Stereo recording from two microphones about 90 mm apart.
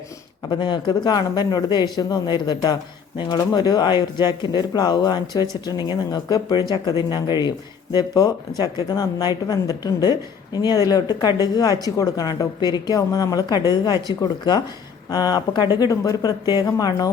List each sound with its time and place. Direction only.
0.5 s speech: 55° left (ahead or behind); by 17.1 s 40° left (ahead or behind)